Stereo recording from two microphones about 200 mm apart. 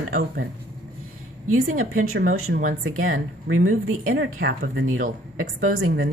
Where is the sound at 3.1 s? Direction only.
90° right.